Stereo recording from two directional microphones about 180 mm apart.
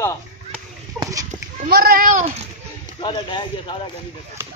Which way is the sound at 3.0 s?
25° left (ahead or behind).